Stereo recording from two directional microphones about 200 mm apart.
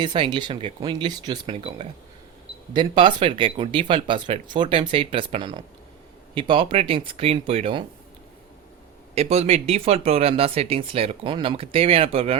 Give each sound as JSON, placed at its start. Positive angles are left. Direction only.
{"t": 0.0, "sound": "speech", "side_deg": -25}
{"t": 9.1, "sound": "speech", "side_deg": -30}